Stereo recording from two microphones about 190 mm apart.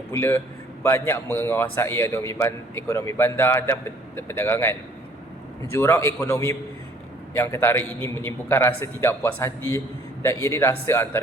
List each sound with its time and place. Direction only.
0.1 s a man's voice: 15° left (ahead or behind)